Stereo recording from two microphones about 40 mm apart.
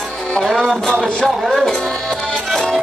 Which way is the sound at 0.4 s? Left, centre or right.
Centre.